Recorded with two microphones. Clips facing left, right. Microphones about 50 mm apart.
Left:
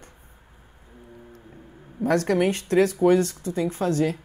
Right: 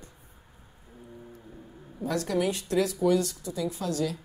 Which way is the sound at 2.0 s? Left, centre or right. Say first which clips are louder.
Left 6 dB; left.